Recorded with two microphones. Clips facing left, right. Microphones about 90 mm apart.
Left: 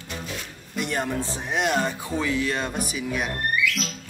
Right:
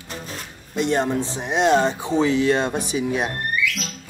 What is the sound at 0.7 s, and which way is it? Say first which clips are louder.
Speech: right 6 dB; 25° right (ahead or behind).